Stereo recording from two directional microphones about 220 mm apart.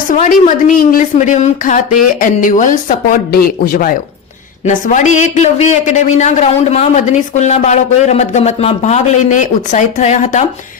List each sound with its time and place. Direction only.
0.1 s a man's voice: 35° left (ahead or behind)